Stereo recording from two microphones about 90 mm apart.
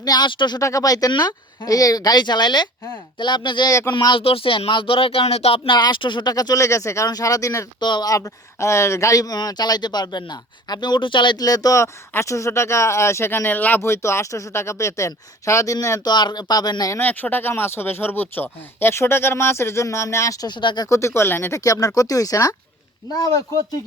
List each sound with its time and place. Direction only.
0.0 s speech: 45° left (ahead or behind)
0.3 s speech: 60° left (ahead or behind)
0.6 s speech: 40° left (ahead or behind); by 3.7 s 55° left (ahead or behind)
4.1 s speech: 90° left
5.7 s speech: 55° left (ahead or behind); by 7.7 s 35° left (ahead or behind)
7.8 s speech: 55° left (ahead or behind)
8.1 s speech: 35° left (ahead or behind)
16.1 s speech: 50° left (ahead or behind)
17.0 s speech: 20° left (ahead or behind); by 20.5 s 35° left (ahead or behind)
20.5 s speech: 60° left (ahead or behind)
20.9 s speech: 30° left (ahead or behind)
21.6 s speech: 40° left (ahead or behind)